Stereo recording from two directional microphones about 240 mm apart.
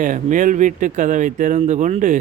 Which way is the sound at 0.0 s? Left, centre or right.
Right.